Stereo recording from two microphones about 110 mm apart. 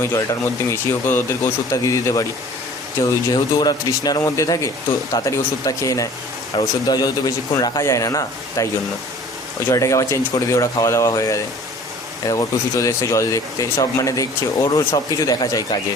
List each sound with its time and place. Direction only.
0.2 s speech: 30° left (ahead or behind)